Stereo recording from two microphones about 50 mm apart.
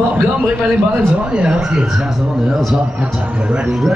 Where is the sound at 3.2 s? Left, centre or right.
Right.